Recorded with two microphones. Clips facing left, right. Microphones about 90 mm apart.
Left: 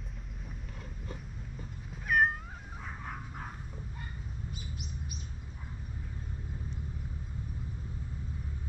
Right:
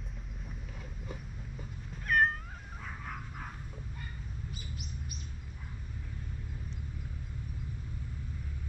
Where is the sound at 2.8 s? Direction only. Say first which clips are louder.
Left 1 dB; 5° left (ahead or behind).